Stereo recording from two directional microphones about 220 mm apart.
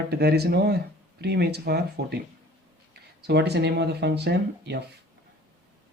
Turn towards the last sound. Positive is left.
turn(degrees=-50)  # may be behind; listen again after turning